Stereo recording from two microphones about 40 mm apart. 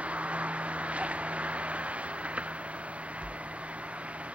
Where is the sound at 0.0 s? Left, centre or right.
Right.